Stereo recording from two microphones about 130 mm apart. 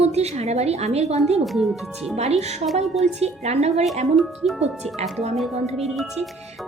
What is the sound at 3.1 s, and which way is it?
Speech, 55° right (ahead or behind).